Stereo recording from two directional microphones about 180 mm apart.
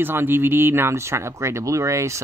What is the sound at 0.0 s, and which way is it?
Speech, 10° right (ahead or behind).